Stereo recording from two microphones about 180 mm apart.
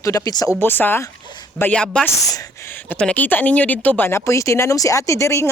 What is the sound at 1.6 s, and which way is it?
Speech, 10° left (ahead or behind).